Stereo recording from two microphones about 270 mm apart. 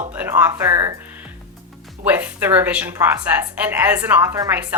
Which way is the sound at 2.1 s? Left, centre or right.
Centre.